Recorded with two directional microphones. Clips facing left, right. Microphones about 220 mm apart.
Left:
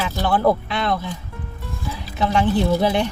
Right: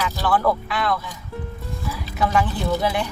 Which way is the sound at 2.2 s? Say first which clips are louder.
Left 3 dB; 25° left (ahead or behind).